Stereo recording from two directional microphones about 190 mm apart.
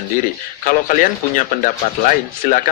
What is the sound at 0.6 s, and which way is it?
Speech, 45° left (ahead or behind).